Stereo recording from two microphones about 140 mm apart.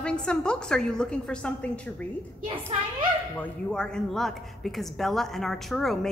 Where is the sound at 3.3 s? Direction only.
10° left (ahead or behind).